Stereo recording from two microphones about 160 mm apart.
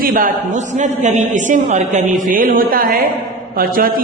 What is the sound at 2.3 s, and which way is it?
A man's voice, 60° right (ahead or behind).